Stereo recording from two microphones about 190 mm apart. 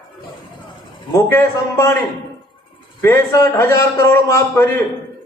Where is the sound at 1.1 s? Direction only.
15° left (ahead or behind).